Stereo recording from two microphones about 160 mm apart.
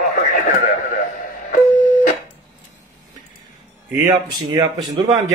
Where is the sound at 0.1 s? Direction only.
55° left (ahead or behind).